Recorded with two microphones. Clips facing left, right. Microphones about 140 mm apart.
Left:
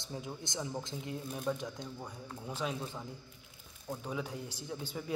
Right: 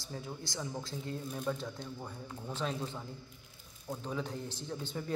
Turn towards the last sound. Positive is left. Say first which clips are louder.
# right 1 dB
turn(degrees=10)  # may be behind; listen again after turning